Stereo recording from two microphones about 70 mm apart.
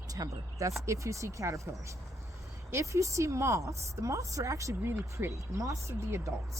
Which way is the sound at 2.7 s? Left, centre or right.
Right.